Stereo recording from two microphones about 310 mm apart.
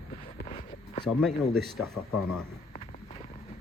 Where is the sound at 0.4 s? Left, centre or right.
Centre.